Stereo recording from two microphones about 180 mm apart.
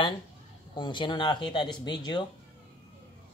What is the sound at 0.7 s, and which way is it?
Speech, 25° left (ahead or behind).